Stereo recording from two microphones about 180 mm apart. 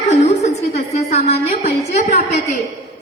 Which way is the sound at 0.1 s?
40° left (ahead or behind).